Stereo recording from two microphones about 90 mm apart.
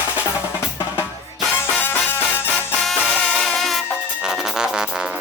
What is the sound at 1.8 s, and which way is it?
Music, 25° left (ahead or behind).